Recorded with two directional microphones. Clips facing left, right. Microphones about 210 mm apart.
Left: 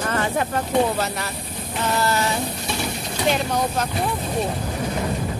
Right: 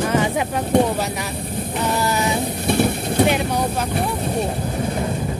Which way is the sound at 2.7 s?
55° right (ahead or behind).